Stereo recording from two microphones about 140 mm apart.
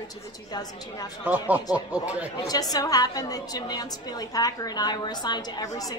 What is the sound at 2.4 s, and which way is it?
A woman's voice, 25° left (ahead or behind).